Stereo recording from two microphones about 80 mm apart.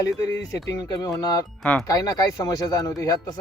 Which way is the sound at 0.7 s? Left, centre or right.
Left.